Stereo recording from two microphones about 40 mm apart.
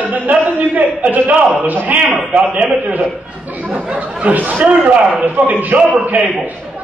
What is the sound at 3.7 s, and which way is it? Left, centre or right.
A man's voice, right.